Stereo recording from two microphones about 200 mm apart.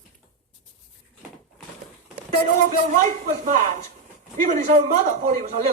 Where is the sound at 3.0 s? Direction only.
40° right (ahead or behind).